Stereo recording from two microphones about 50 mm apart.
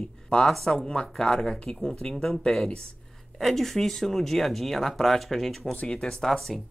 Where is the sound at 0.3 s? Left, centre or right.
Centre.